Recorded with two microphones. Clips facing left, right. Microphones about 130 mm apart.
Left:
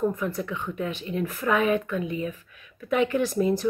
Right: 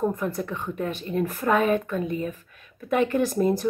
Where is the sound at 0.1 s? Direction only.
45° right (ahead or behind).